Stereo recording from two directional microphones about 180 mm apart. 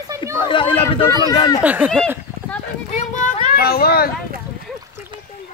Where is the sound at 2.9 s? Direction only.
45° left (ahead or behind).